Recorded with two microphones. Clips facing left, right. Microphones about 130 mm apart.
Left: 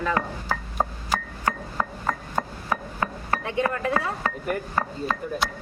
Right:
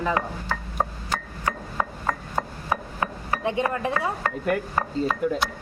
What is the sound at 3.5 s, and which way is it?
Speech, 20° right (ahead or behind).